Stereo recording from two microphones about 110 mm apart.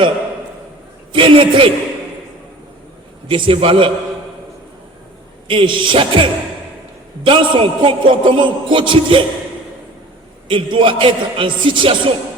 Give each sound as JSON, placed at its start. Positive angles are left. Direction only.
{"t": 1.1, "sound": "a man's voice", "side_deg": -50}
{"t": 3.2, "sound": "a man's voice", "side_deg": -50}
{"t": 5.5, "sound": "a man's voice", "side_deg": -50}
{"t": 10.5, "sound": "a man's voice", "side_deg": -50}